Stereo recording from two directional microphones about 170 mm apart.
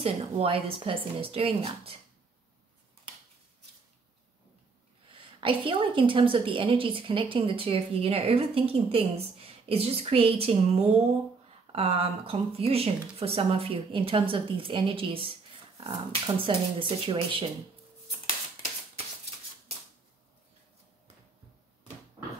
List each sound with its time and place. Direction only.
0.0 s a woman's voice: 35° right (ahead or behind)
5.1 s a woman's voice: 30° right (ahead or behind)